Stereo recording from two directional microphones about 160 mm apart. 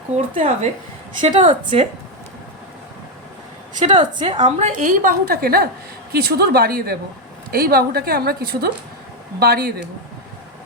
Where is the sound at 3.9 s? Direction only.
35° right (ahead or behind).